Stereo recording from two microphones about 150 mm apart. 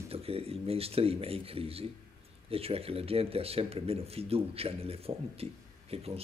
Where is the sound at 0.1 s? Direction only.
40° right (ahead or behind).